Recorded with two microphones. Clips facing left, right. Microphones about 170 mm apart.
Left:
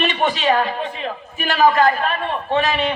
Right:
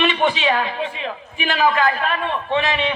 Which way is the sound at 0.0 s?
40° left (ahead or behind).